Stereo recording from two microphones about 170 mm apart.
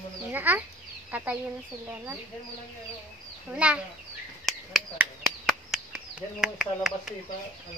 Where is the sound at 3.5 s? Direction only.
5° right (ahead or behind).